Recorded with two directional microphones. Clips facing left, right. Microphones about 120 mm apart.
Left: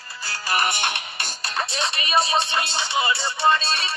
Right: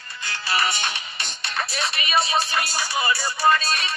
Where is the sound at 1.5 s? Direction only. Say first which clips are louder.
Left 1 dB; 30° left (ahead or behind).